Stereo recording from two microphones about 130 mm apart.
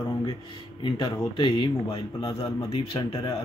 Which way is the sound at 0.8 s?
40° left (ahead or behind).